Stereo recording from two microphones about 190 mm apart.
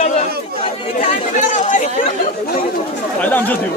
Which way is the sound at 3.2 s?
10° left (ahead or behind).